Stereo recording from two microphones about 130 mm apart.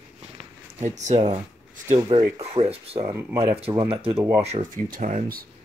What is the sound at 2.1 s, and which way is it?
Speech, 50° right (ahead or behind).